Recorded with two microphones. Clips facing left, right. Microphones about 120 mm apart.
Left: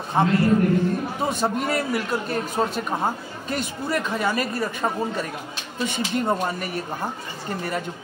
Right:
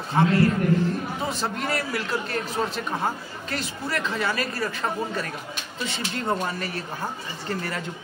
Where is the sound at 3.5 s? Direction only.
15° left (ahead or behind).